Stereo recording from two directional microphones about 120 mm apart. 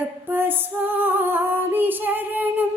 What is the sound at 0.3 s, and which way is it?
Female singing, 15° right (ahead or behind).